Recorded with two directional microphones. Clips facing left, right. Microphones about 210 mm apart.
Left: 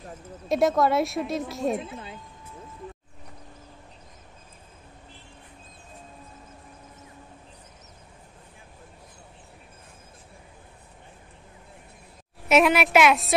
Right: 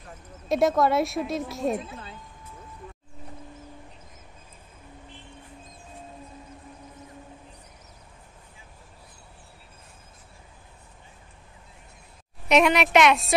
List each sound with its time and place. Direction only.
0.5 s a woman's voice: centre (ahead or behind)
1.9 s music: 20° left (ahead or behind)
12.4 s a woman's voice: 5° left (ahead or behind)